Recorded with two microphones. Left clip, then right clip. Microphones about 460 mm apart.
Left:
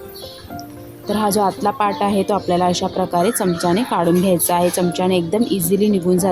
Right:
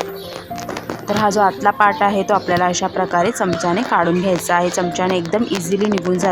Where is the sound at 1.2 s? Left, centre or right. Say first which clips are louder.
Right 3 dB; left.